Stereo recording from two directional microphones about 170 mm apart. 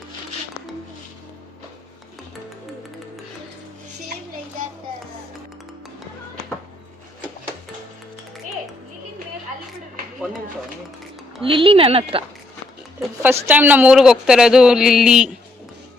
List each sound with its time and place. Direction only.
11.4 s speech: 35° right (ahead or behind)
13.5 s speech: 10° right (ahead or behind)